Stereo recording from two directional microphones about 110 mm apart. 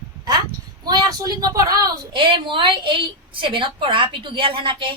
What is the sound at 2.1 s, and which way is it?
A woman's voice, 50° right (ahead or behind).